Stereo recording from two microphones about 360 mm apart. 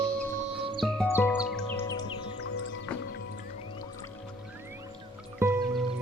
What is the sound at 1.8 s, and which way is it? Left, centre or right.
Music, centre.